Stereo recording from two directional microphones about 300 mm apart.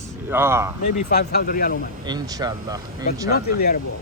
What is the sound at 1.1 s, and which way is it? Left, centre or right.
Speech, left.